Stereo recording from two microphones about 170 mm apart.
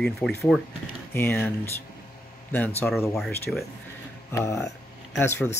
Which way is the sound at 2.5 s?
10° left (ahead or behind).